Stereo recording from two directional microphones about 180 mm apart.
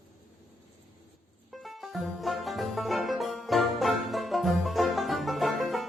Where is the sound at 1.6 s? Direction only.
Centre (ahead or behind).